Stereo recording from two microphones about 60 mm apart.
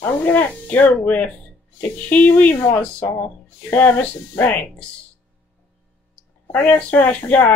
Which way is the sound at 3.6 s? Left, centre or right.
Left.